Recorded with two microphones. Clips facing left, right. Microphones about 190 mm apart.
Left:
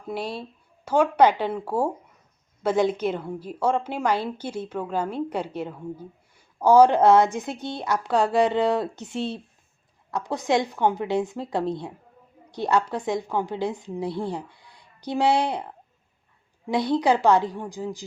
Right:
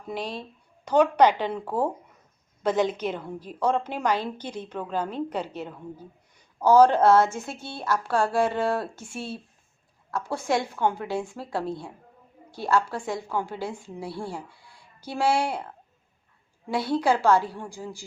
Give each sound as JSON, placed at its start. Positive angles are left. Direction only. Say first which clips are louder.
{"t": 0.1, "sound": "a woman's voice", "louder": "left 2 dB", "side_deg": 10}